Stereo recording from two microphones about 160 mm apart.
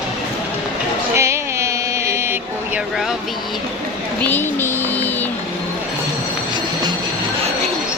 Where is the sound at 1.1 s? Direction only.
15° right (ahead or behind).